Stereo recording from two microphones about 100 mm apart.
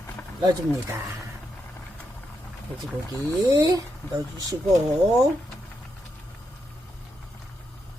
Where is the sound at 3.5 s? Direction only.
40° right (ahead or behind).